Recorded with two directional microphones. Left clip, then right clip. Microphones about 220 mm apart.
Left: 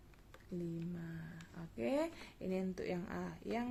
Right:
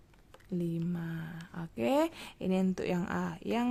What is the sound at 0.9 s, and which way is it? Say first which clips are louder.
Speech: right 9 dB; 40° right (ahead or behind).